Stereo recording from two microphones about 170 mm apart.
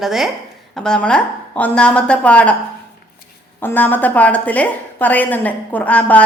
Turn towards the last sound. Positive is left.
turn(degrees=10)  # may be behind; listen again after turning